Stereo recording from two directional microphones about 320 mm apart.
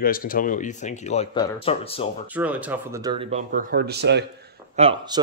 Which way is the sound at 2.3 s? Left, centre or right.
Centre.